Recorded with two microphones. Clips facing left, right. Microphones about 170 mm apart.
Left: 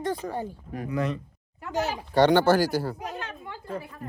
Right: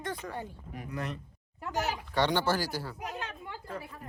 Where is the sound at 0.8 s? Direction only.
90° left.